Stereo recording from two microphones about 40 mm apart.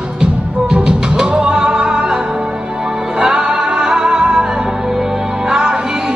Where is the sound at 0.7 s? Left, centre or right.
Centre.